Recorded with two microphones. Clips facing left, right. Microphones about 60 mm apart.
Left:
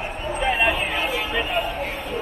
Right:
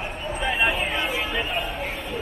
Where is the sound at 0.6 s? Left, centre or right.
Centre.